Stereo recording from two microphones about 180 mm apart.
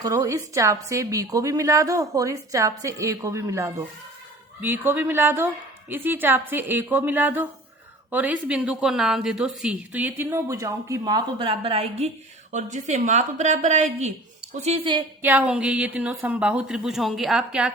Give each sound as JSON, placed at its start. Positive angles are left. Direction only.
{"t": 0.0, "sound": "a woman's voice", "side_deg": -20}
{"t": 15.2, "sound": "a woman's voice", "side_deg": -10}